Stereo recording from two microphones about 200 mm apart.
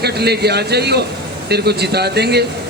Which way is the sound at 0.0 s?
55° right (ahead or behind).